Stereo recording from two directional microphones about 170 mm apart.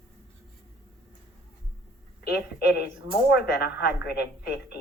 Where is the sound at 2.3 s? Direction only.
70° left (ahead or behind).